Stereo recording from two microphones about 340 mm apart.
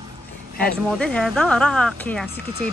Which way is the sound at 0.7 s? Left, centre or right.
Centre.